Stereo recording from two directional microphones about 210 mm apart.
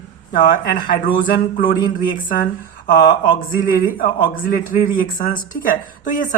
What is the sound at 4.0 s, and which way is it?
Speech, 40° left (ahead or behind).